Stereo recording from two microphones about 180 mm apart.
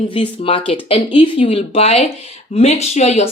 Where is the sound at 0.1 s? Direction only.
30° left (ahead or behind).